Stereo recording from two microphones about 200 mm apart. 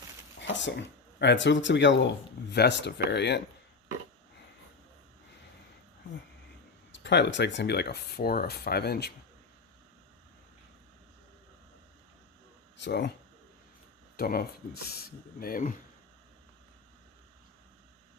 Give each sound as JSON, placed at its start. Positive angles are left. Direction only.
{"t": 0.3, "sound": "speech", "side_deg": 65}
{"t": 6.9, "sound": "speech", "side_deg": 60}
{"t": 12.7, "sound": "speech", "side_deg": 60}
{"t": 14.2, "sound": "speech", "side_deg": 50}